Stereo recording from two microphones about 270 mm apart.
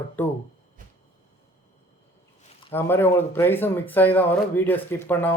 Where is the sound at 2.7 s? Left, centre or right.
Centre.